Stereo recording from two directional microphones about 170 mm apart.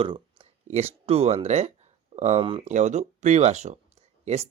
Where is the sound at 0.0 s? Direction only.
30° right (ahead or behind).